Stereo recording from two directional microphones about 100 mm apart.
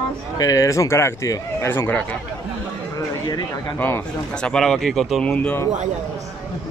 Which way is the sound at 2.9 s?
45° left (ahead or behind).